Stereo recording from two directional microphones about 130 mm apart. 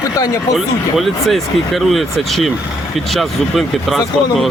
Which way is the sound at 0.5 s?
Centre (ahead or behind).